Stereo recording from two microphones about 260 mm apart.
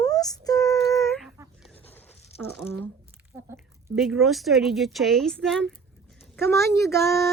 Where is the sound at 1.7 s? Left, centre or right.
Centre.